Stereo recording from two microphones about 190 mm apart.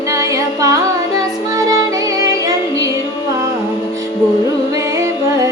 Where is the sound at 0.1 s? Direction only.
20° right (ahead or behind).